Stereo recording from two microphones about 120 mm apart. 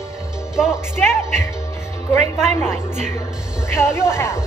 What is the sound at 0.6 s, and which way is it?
Speech, 5° right (ahead or behind).